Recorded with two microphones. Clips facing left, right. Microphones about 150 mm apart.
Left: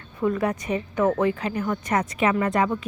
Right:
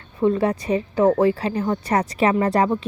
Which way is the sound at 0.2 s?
30° right (ahead or behind).